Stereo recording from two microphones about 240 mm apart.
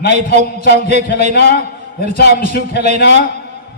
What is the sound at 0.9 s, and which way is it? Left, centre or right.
Speech, right.